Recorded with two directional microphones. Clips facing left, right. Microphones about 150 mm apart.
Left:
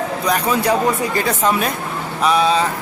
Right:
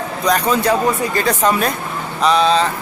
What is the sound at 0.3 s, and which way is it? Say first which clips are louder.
Speech: right 2 dB; 10° left (ahead or behind).